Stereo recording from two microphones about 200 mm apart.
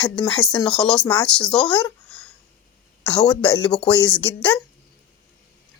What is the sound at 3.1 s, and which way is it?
A woman's voice, 5° left (ahead or behind).